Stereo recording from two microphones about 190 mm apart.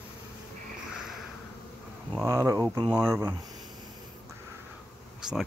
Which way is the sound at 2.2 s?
15° right (ahead or behind).